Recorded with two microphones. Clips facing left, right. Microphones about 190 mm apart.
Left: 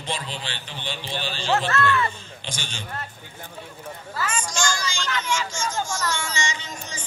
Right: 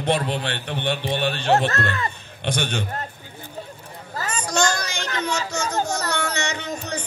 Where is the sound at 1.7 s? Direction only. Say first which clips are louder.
Left 3 dB; 40° right (ahead or behind).